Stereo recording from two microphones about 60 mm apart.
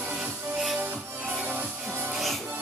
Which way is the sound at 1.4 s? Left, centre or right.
Right.